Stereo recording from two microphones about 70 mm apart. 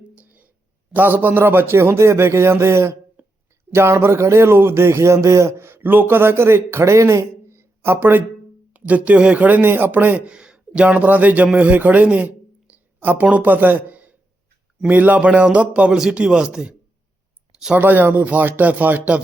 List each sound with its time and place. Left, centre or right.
0.2 s a sound: right
0.9 s speech: right
3.2 s a sound: right
3.7 s speech: right
8.7 s a man's voice: right
10.8 s a man's voice: right
17.7 s speech: right